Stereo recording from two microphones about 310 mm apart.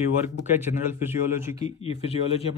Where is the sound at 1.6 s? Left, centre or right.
Centre.